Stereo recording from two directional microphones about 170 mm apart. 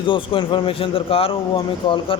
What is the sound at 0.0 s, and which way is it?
A man's voice, 30° left (ahead or behind).